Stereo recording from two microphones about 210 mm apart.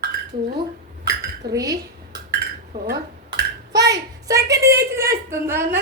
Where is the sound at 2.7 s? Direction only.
50° right (ahead or behind).